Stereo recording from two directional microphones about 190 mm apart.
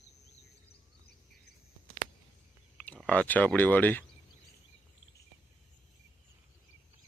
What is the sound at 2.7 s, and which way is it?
Speech, 5° left (ahead or behind).